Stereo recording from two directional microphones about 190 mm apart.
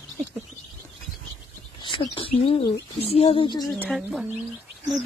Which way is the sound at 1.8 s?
25° left (ahead or behind).